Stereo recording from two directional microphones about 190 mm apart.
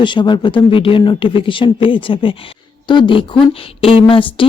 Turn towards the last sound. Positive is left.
turn(degrees=25)  # may be behind; listen again after turning